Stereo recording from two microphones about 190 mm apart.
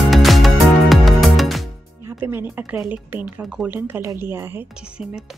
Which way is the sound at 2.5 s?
10° right (ahead or behind).